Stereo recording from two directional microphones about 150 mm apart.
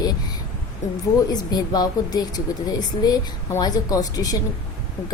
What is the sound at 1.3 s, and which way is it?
A woman's voice, 25° left (ahead or behind).